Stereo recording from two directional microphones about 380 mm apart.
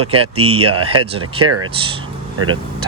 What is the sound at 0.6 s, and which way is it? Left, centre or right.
Speech, right.